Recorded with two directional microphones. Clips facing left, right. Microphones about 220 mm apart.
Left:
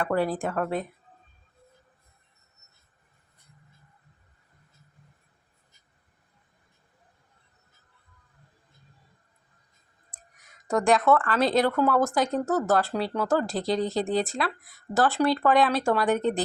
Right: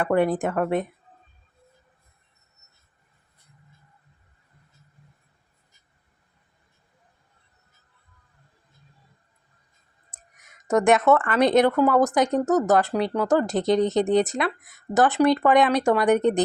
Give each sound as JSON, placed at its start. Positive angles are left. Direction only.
{"t": 0.0, "sound": "a woman's voice", "side_deg": -20}
{"t": 0.4, "sound": "speech", "side_deg": -5}
{"t": 10.1, "sound": "clicking", "side_deg": -20}
{"t": 10.7, "sound": "a woman's voice", "side_deg": -20}